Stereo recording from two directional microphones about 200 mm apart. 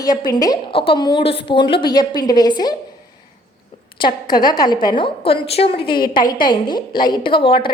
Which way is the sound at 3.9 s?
20° left (ahead or behind).